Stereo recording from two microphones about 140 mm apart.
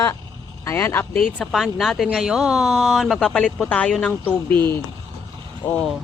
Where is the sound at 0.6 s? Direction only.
20° left (ahead or behind).